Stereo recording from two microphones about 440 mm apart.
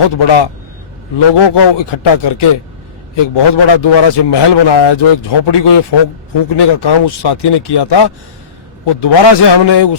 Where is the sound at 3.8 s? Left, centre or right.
Left.